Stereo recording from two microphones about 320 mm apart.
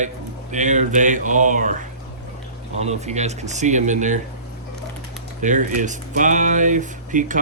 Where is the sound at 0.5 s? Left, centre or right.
Right.